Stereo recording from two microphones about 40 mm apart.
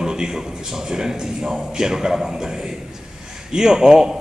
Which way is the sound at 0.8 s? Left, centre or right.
Centre.